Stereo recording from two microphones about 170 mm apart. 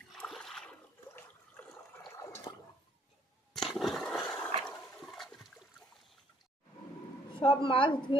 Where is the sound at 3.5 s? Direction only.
Centre (ahead or behind).